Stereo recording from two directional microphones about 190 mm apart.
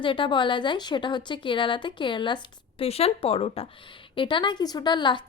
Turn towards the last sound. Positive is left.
turn(degrees=25)  # may be behind; listen again after turning